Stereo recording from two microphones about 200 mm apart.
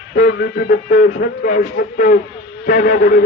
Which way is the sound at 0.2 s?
50° left (ahead or behind).